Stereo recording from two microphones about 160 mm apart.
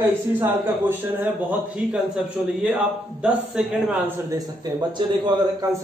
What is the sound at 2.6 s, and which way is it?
A man's voice, 5° right (ahead or behind).